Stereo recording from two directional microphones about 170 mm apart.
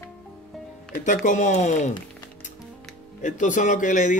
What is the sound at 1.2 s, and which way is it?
Speech, 45° left (ahead or behind).